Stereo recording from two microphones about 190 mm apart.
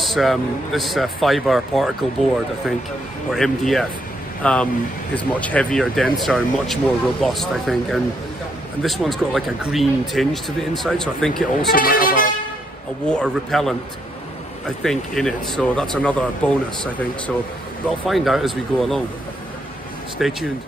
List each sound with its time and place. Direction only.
0.0 s speech: centre (ahead or behind)
3.3 s speech: centre (ahead or behind)
11.7 s speech: 50° left (ahead or behind)
13.0 s speech: 5° left (ahead or behind)
14.8 s speech: centre (ahead or behind)
18.0 s speech: centre (ahead or behind)
20.2 s speech: centre (ahead or behind)